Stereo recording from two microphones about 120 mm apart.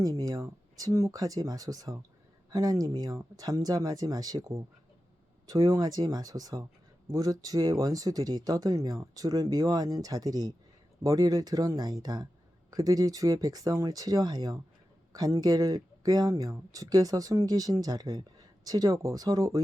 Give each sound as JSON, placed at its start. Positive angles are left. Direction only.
{"t": 0.0, "sound": "speech", "side_deg": -30}